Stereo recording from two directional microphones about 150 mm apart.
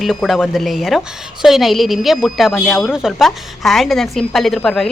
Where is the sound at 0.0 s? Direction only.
Centre (ahead or behind).